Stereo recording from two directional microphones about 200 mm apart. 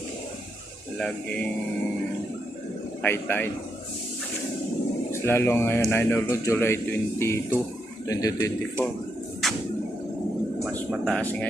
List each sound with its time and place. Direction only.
0.9 s speech: 5° left (ahead or behind)
3.0 s a man's voice: 10° left (ahead or behind)
5.1 s a man's voice: 10° left (ahead or behind)
9.4 s a sound: centre (ahead or behind)
10.6 s a sound: 5° left (ahead or behind)
11.0 s speech: 5° left (ahead or behind)